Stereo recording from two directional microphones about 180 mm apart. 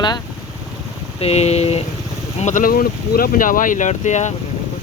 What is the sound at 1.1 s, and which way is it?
Speech, 35° left (ahead or behind).